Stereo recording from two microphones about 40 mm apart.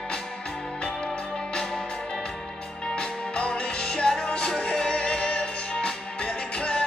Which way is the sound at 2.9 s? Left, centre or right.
Left.